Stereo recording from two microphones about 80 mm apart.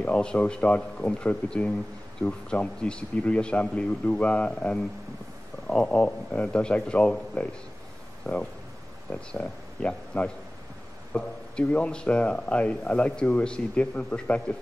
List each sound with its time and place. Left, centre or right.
0.0 s speech: centre